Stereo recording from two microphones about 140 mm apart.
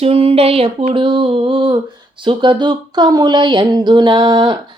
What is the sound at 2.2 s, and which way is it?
Speech, 35° right (ahead or behind).